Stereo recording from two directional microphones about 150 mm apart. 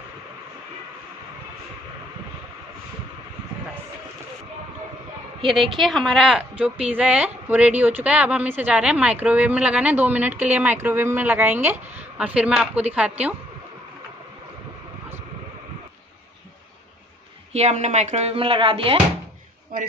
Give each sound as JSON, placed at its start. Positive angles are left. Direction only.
{"t": 5.5, "sound": "speech", "side_deg": 0}
{"t": 17.5, "sound": "speech", "side_deg": -45}
{"t": 19.7, "sound": "a man's voice", "side_deg": -70}